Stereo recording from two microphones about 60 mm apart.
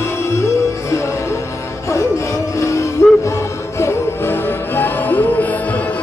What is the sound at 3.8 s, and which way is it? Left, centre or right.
Music, left.